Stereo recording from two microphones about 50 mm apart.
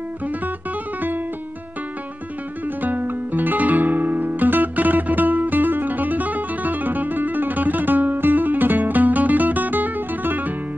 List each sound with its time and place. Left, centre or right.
2.6 s music: right